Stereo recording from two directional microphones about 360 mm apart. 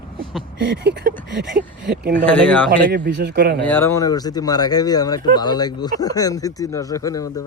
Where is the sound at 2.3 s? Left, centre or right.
Centre.